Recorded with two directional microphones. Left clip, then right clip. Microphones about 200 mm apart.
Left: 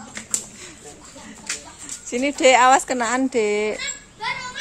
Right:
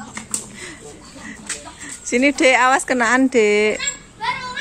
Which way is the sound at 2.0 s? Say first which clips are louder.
Right 2 dB; centre (ahead or behind).